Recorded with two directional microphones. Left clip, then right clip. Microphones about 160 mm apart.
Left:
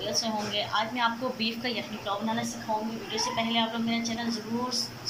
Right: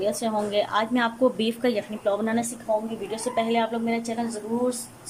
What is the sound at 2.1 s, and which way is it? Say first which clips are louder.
Speech: right 8 dB; 90° right.